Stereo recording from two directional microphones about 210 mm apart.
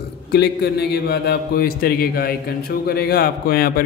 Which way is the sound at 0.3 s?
50° left (ahead or behind).